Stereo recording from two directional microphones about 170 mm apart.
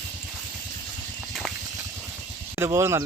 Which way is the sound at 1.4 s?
5° right (ahead or behind).